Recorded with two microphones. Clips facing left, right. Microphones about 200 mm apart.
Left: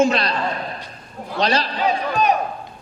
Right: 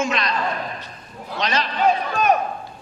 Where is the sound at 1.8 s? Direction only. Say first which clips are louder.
Right 1 dB; 50° right (ahead or behind).